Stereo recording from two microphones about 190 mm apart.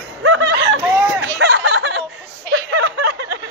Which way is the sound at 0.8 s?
10° right (ahead or behind).